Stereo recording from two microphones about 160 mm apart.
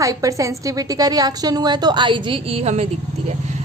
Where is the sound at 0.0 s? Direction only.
20° right (ahead or behind).